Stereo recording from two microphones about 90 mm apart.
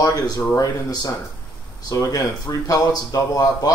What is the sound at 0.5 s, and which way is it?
Speech, 40° left (ahead or behind).